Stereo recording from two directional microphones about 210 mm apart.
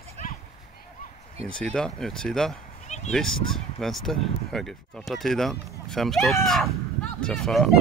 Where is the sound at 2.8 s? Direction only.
30° left (ahead or behind).